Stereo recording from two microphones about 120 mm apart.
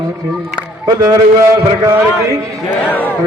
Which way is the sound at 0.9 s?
30° right (ahead or behind).